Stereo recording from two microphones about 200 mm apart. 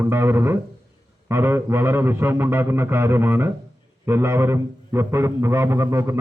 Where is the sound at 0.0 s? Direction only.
10° right (ahead or behind).